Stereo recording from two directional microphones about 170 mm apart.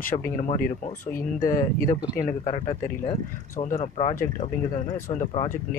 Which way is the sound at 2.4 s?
40° left (ahead or behind).